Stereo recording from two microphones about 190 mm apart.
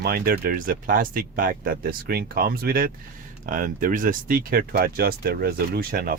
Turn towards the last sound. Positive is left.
turn(degrees=-50)  # may be behind; listen again after turning